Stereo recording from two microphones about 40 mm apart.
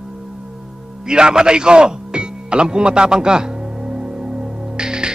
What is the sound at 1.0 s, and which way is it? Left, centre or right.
Music, centre.